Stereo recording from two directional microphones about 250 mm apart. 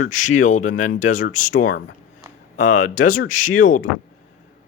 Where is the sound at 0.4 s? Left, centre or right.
Left.